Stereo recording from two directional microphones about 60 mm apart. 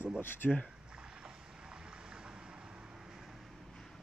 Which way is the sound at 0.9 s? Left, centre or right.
Centre.